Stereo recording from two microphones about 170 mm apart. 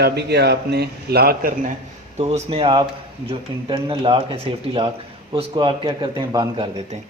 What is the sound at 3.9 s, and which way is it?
Speech, 35° right (ahead or behind).